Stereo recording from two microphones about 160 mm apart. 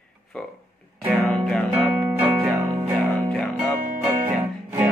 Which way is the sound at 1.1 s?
5° left (ahead or behind).